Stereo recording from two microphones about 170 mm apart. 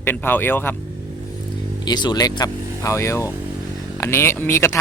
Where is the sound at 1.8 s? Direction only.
25° left (ahead or behind).